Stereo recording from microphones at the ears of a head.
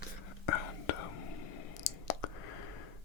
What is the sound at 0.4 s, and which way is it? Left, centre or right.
Whispering, left.